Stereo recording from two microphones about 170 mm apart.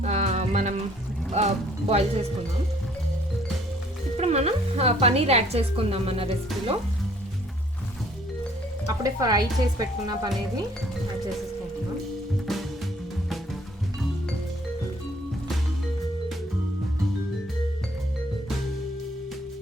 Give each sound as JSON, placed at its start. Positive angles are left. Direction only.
{"t": 0.0, "sound": "music", "side_deg": -40}
{"t": 1.3, "sound": "speech", "side_deg": -40}
{"t": 4.2, "sound": "speech", "side_deg": -40}
{"t": 9.0, "sound": "stir", "side_deg": -20}